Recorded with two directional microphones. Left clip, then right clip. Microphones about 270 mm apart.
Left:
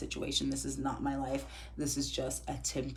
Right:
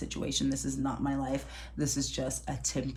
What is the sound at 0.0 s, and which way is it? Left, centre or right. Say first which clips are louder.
Speech: right 2 dB; right.